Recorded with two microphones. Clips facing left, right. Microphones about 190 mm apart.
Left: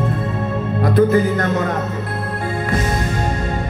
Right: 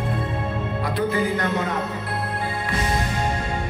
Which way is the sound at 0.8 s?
45° left (ahead or behind).